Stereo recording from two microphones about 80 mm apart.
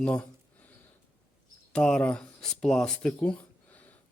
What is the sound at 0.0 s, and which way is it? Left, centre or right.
Speech, centre.